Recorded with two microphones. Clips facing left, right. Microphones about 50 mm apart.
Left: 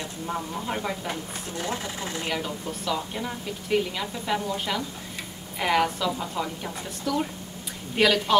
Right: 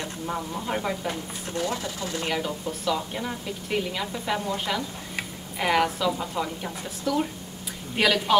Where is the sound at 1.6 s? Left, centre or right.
Left.